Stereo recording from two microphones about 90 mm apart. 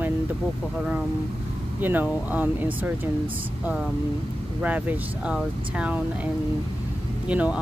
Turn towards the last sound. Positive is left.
turn(degrees=-15)  # may be behind; listen again after turning